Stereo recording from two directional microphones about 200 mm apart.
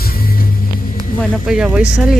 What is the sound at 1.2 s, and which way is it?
Speech, centre (ahead or behind).